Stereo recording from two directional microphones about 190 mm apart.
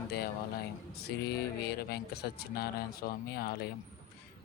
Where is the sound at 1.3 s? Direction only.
55° left (ahead or behind).